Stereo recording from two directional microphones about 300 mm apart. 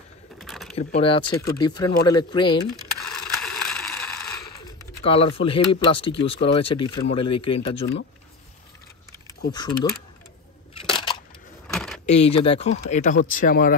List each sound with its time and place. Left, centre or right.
0.4 s a sound: centre
0.7 s speech: centre
2.7 s ratchet: centre
5.0 s speech: centre
9.5 s speech: centre
11.6 s keys jangling: centre
12.1 s speech: centre